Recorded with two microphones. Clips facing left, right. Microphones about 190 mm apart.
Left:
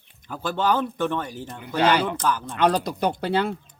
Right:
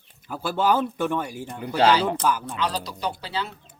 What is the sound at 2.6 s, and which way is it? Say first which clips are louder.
Speech: left 7 dB; 55° left (ahead or behind).